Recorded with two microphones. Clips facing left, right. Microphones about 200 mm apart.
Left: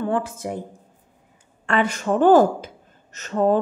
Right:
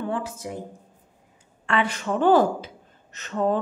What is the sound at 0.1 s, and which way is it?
Speech, 50° left (ahead or behind).